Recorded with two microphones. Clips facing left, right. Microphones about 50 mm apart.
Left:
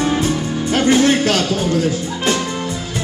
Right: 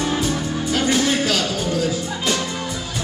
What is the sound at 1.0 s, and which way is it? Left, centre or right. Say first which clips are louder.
Music: left 5 dB; left.